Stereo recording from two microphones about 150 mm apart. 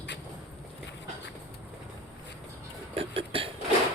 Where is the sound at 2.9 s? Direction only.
40° right (ahead or behind).